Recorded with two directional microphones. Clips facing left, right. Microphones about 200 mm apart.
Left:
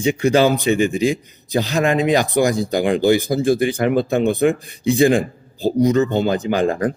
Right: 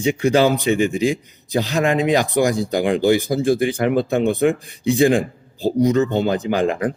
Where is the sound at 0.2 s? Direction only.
40° left (ahead or behind).